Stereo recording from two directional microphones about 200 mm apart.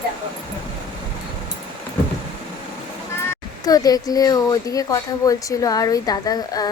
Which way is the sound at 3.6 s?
20° left (ahead or behind).